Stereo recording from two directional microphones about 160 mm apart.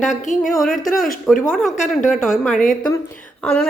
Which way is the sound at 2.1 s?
Centre (ahead or behind).